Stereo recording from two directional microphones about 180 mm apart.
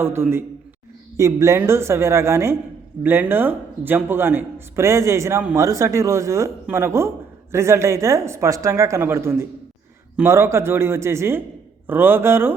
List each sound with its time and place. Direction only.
0.0 s speech: 15° right (ahead or behind)